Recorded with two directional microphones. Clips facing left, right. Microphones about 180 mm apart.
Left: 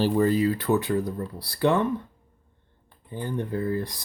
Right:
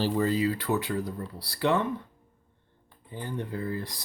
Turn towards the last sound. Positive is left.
turn(degrees=50)  # may be behind; listen again after turning